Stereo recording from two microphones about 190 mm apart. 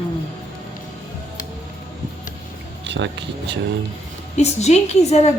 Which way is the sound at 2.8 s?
65° right (ahead or behind).